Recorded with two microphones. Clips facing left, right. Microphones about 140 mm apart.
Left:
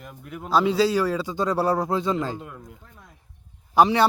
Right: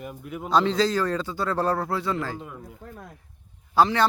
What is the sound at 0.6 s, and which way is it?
A man's voice, 10° left (ahead or behind).